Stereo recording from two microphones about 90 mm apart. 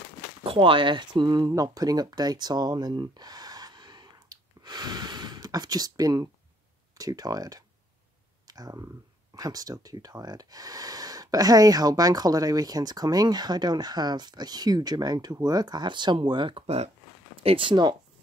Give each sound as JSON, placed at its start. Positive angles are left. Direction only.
{"t": 0.4, "sound": "speech", "side_deg": -85}
{"t": 17.4, "sound": "speech", "side_deg": -80}